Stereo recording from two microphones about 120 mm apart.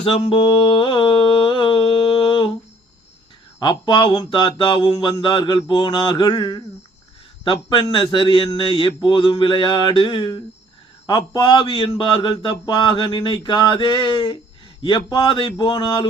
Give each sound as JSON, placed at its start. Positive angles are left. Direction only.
{"t": 0.0, "sound": "speech", "side_deg": 50}
{"t": 0.4, "sound": "a sound", "side_deg": 40}
{"t": 3.6, "sound": "speech", "side_deg": 40}